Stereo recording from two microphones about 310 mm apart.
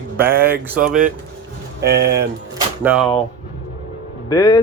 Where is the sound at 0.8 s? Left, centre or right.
Right.